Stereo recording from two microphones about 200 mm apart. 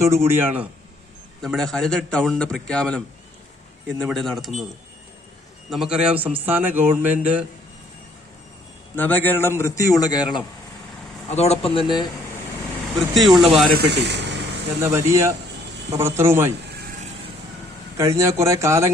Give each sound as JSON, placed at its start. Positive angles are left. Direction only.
{"t": 0.3, "sound": "a man's voice", "side_deg": -10}
{"t": 1.4, "sound": "a man's voice", "side_deg": 0}
{"t": 5.7, "sound": "a man's voice", "side_deg": -5}
{"t": 9.0, "sound": "a man's voice", "side_deg": 10}
{"t": 11.3, "sound": "speech", "side_deg": 30}
{"t": 13.1, "sound": "a man's voice", "side_deg": 0}
{"t": 13.7, "sound": "speech", "side_deg": -55}
{"t": 14.8, "sound": "a man's voice", "side_deg": -15}
{"t": 17.9, "sound": "a man's voice", "side_deg": -15}